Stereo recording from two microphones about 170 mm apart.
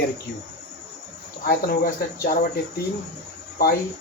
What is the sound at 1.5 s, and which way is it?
Speech, 60° left (ahead or behind).